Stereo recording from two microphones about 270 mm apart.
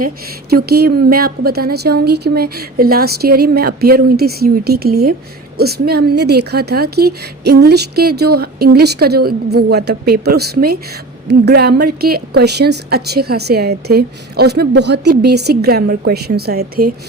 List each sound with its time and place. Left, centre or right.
0.5 s a woman's voice: right